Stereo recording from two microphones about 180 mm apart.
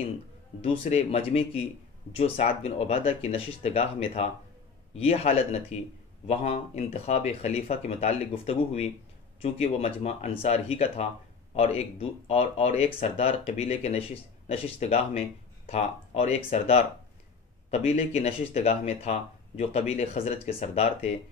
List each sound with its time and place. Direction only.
0.6 s speech: 35° left (ahead or behind)